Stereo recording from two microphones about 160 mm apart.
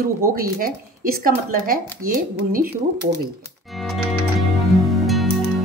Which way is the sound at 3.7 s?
Centre (ahead or behind).